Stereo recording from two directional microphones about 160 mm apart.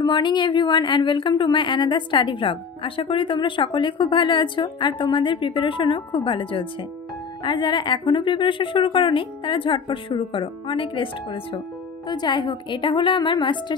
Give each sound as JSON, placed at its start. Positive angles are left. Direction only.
{"t": 0.0, "sound": "a woman's voice", "side_deg": 30}